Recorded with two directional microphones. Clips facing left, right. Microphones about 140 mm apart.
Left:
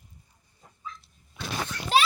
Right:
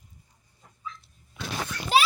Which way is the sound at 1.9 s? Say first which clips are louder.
Right 1 dB; centre (ahead or behind).